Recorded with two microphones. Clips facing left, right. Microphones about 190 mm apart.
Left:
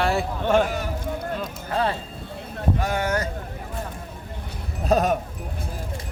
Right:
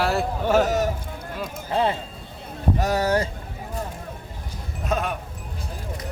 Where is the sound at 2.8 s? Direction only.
35° right (ahead or behind).